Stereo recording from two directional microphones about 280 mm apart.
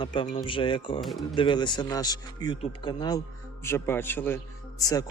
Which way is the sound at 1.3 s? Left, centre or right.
Centre.